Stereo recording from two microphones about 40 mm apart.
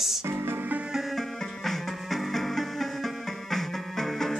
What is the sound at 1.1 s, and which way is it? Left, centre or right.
Music, centre.